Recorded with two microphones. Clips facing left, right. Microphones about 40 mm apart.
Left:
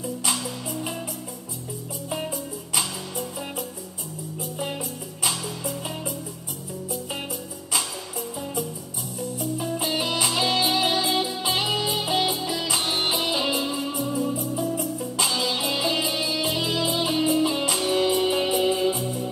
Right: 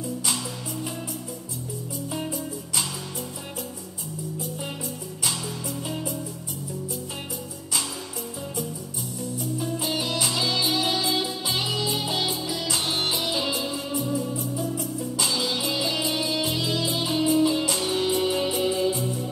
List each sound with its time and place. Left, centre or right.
9.9 s music: centre